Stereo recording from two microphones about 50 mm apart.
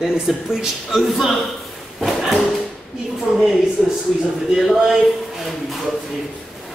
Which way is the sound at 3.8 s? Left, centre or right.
Centre.